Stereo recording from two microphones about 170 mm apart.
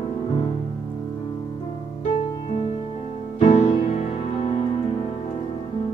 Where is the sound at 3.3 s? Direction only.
35° left (ahead or behind).